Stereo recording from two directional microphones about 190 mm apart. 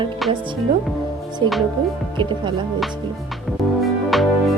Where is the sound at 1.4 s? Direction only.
25° right (ahead or behind).